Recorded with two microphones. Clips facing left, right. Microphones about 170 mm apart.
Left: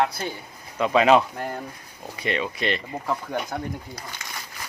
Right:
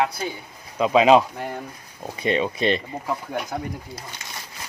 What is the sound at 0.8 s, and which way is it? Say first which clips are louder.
Speech: right 2 dB; 15° right (ahead or behind).